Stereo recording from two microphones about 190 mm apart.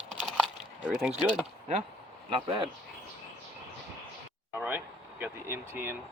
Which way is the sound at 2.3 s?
25° right (ahead or behind).